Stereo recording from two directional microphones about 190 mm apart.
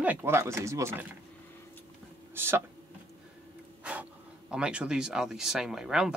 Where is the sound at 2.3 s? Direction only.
10° right (ahead or behind).